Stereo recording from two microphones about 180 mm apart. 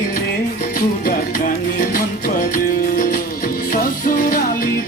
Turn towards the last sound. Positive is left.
turn(degrees=50)  # may be behind; listen again after turning